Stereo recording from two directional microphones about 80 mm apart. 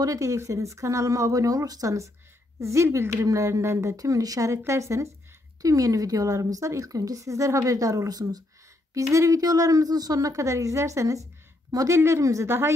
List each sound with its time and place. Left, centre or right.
0.0 s a woman's voice: right
8.9 s a woman's voice: right
12.4 s speech: right